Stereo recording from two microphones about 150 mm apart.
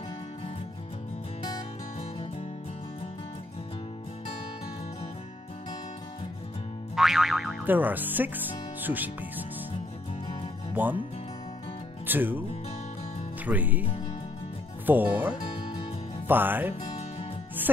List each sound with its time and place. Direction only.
7.0 s music: centre (ahead or behind)
7.6 s speech: 10° right (ahead or behind)
10.7 s speech: 10° right (ahead or behind)
12.1 s speech: 15° right (ahead or behind)
13.5 s speech: 10° right (ahead or behind)
14.9 s speech: 10° right (ahead or behind)